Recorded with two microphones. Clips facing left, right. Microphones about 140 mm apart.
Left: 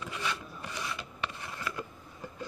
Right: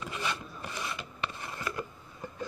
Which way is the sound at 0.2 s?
15° right (ahead or behind).